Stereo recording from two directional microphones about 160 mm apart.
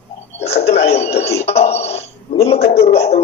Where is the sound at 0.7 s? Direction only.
40° left (ahead or behind).